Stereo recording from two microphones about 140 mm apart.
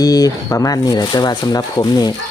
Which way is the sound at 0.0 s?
25° left (ahead or behind).